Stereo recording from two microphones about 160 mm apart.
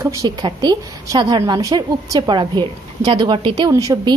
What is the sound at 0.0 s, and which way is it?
A woman's voice, 25° right (ahead or behind).